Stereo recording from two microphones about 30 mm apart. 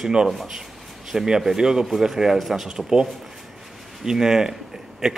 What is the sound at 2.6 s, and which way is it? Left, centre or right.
Speech, right.